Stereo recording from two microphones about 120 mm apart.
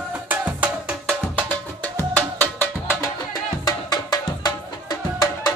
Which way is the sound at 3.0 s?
35° left (ahead or behind).